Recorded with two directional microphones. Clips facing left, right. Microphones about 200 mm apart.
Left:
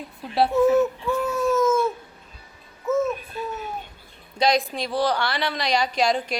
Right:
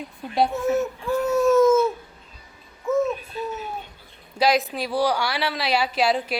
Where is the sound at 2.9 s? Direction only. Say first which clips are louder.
Right 1 dB; centre (ahead or behind).